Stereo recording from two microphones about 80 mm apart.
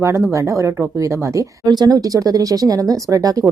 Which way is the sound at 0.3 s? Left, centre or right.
Right.